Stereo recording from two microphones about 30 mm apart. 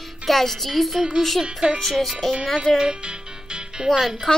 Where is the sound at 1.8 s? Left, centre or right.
Centre.